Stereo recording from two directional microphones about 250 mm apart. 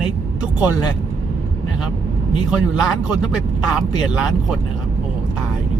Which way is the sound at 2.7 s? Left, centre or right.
Centre.